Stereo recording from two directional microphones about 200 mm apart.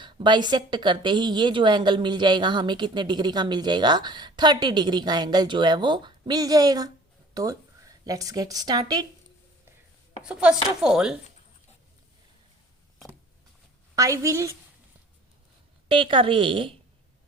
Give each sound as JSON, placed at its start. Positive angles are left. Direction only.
{"t": 0.0, "sound": "a woman's voice", "side_deg": -20}
{"t": 10.2, "sound": "a woman's voice", "side_deg": -5}
{"t": 13.9, "sound": "a woman's voice", "side_deg": -15}
{"t": 15.9, "sound": "a woman's voice", "side_deg": -25}